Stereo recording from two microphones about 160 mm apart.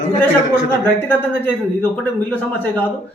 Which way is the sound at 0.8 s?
10° left (ahead or behind).